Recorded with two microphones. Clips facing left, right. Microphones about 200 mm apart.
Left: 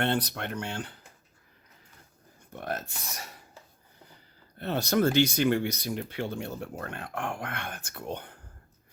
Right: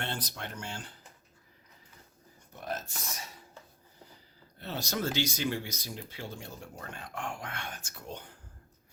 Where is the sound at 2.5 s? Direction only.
60° left (ahead or behind).